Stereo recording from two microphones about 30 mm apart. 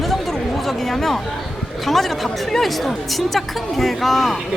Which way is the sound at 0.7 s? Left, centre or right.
Centre.